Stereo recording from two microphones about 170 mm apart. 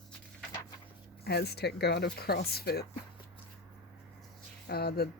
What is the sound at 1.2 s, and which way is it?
Speech, 70° left (ahead or behind).